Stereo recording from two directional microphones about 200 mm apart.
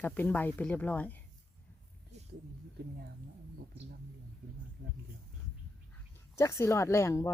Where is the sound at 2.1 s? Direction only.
35° right (ahead or behind).